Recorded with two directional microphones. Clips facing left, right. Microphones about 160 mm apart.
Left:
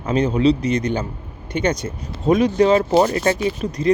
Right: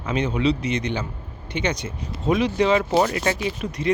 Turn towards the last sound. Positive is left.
turn(degrees=40)  # may be behind; listen again after turning